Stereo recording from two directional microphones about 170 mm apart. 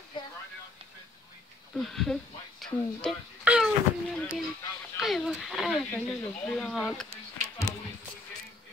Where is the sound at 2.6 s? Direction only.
Centre (ahead or behind).